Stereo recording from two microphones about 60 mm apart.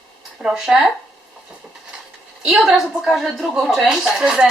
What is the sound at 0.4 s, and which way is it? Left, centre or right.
Speech, centre.